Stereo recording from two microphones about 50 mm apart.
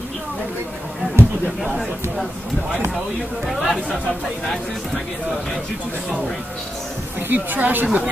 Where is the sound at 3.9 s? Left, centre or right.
Centre.